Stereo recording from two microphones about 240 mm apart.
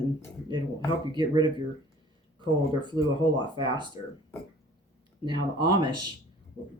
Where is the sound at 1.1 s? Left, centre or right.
Centre.